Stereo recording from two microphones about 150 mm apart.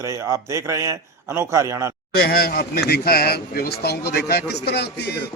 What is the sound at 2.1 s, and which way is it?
A man's voice, 90° left.